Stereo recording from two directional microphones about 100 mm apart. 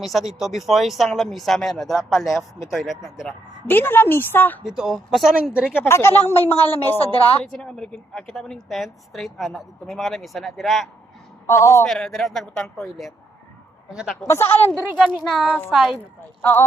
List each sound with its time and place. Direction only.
0.0 s a woman's voice: centre (ahead or behind)
3.7 s a woman's voice: 20° left (ahead or behind)
4.6 s a woman's voice: 5° right (ahead or behind)
5.7 s a woman's voice: 25° left (ahead or behind)
7.3 s a woman's voice: 10° left (ahead or behind)
11.4 s a woman's voice: 30° left (ahead or behind)
11.9 s a woman's voice: 5° left (ahead or behind)
13.9 s speech: 5° right (ahead or behind)
14.3 s a woman's voice: 25° left (ahead or behind)
14.9 s a woman's voice: centre (ahead or behind)
15.7 s a woman's voice: centre (ahead or behind)
16.4 s a woman's voice: 20° left (ahead or behind)